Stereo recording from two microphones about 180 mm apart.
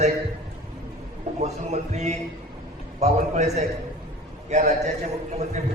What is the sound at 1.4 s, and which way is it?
A man's voice, 40° right (ahead or behind).